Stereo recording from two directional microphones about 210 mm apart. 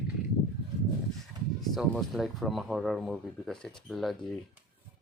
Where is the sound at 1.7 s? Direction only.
Centre (ahead or behind).